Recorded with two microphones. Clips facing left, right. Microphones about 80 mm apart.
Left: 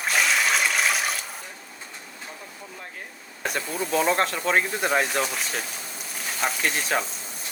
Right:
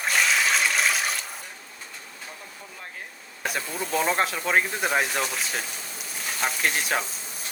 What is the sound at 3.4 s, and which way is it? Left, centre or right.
Speech, centre.